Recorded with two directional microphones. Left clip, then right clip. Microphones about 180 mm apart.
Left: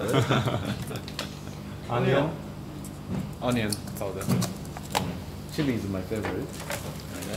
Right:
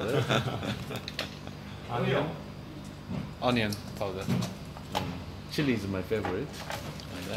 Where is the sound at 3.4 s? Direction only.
40° right (ahead or behind).